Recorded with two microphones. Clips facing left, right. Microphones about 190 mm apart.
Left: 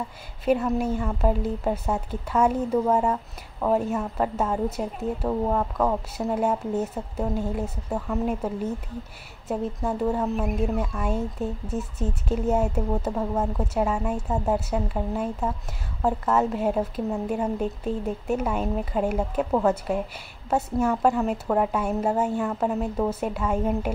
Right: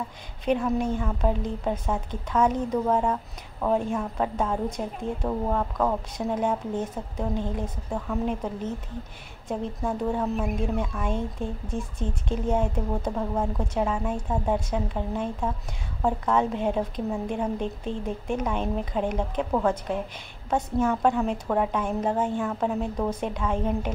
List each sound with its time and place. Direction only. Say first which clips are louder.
0.5 s speech: left 2 dB; 5° left (ahead or behind)